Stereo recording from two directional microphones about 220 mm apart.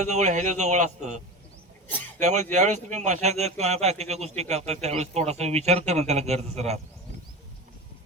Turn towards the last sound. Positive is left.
turn(degrees=-30)  # may be behind; listen again after turning